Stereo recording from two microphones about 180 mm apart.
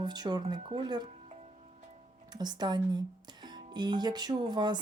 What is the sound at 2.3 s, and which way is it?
Speech, 25° right (ahead or behind).